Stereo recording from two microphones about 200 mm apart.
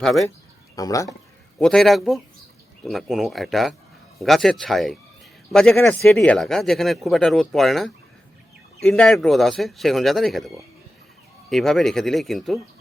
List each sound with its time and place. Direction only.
0.0 s speech: centre (ahead or behind)
0.8 s speech: 15° left (ahead or behind)
1.5 s speech: centre (ahead or behind)